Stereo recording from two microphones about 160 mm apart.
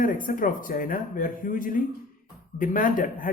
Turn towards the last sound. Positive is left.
turn(degrees=60)  # may be behind; listen again after turning